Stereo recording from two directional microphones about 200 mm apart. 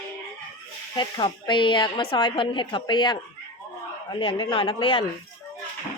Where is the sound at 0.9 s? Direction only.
20° left (ahead or behind).